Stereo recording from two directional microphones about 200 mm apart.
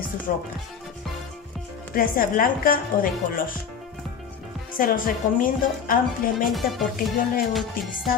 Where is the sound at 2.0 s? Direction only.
45° left (ahead or behind).